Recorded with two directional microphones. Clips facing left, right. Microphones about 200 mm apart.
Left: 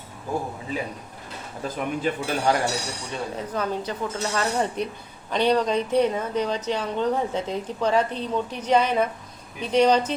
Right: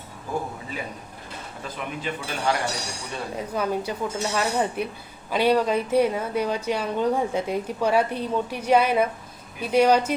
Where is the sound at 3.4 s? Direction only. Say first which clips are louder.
Right 3 dB; 10° right (ahead or behind).